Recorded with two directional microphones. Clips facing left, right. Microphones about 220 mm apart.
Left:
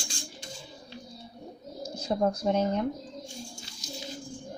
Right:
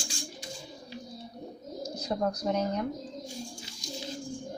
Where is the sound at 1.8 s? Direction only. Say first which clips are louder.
Left 3 dB; 30° left (ahead or behind).